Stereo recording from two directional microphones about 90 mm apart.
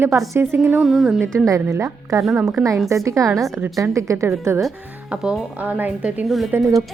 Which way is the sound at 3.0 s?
35° right (ahead or behind).